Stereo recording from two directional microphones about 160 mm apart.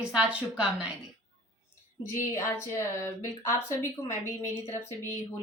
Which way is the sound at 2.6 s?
20° left (ahead or behind).